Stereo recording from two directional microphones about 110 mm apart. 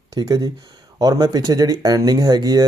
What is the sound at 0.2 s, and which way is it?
A man's voice, 35° right (ahead or behind).